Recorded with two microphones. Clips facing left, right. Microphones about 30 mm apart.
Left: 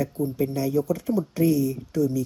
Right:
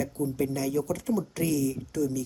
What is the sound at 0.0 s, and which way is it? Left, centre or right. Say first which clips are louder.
Speech: left 3 dB; left.